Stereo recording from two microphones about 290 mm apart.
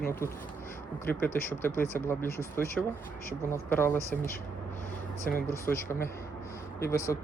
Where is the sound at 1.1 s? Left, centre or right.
Centre.